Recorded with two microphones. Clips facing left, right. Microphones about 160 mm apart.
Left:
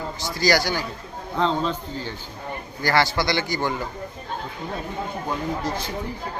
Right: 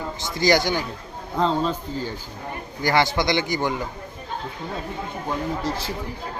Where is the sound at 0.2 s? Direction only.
20° right (ahead or behind).